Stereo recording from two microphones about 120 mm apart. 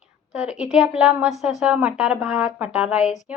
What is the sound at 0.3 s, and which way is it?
A woman's voice, 5° right (ahead or behind).